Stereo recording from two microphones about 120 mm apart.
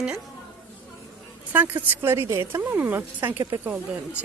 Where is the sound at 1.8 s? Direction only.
20° right (ahead or behind).